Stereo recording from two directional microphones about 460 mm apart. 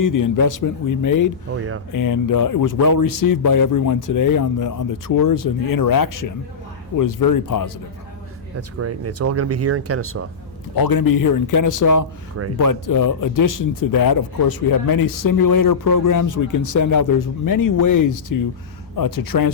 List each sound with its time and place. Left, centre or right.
0.0 s a man's voice: left
8.8 s speech: right
10.8 s a man's voice: left